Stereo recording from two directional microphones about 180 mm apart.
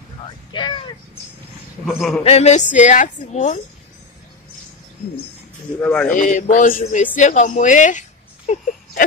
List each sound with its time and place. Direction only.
0.5 s speech: 25° left (ahead or behind)
1.9 s a man's voice: centre (ahead or behind)
2.2 s a woman's voice: 35° left (ahead or behind)
5.8 s speech: 10° left (ahead or behind)
6.1 s a sound: 45° left (ahead or behind)
8.5 s a woman's voice: 40° left (ahead or behind)